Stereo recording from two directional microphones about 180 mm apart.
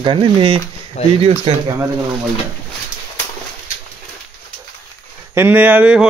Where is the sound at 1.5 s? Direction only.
35° right (ahead or behind).